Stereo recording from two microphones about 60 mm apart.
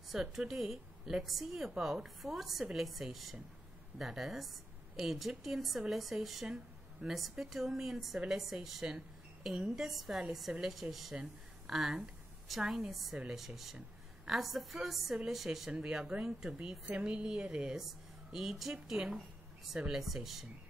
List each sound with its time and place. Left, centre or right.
0.1 s a woman's voice: centre
6.4 s a sound: centre
7.2 s a woman's voice: centre
15.7 s a woman's voice: centre
17.7 s a woman's voice: centre